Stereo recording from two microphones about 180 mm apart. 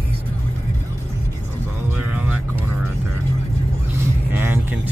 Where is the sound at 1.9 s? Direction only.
10° right (ahead or behind).